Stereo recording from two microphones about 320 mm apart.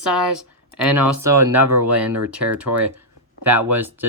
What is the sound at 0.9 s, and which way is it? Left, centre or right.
Speech, centre.